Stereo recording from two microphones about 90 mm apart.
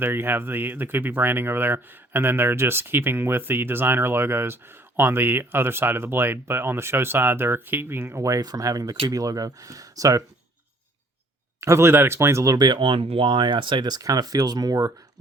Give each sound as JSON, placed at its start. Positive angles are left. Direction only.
{"t": 0.0, "sound": "speech", "side_deg": -25}
{"t": 8.2, "sound": "speech", "side_deg": -40}
{"t": 11.6, "sound": "speech", "side_deg": -30}
{"t": 12.5, "sound": "speech", "side_deg": -55}